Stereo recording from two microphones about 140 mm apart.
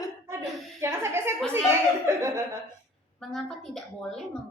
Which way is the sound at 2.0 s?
20° right (ahead or behind).